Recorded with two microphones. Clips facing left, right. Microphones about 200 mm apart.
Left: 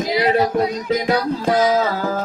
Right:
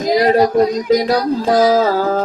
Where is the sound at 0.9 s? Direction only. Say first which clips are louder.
Right 4 dB; 35° right (ahead or behind).